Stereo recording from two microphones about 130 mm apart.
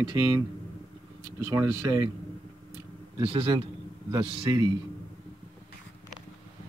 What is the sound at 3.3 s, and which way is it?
A man's voice, 45° right (ahead or behind).